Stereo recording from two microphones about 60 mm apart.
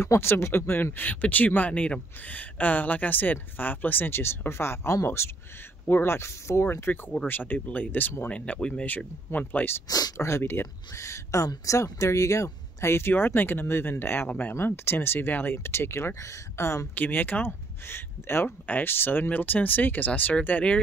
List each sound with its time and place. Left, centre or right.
0.0 s speech: left
0.9 s speech: left
4.5 s speech: left
7.2 s speech: left
8.3 s speech: centre
8.8 s speech: left
9.8 s speech: left
10.1 s speech: left
11.0 s speech: left
16.9 s speech: left